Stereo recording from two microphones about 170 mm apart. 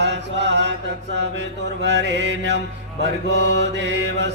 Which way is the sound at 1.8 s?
90° right.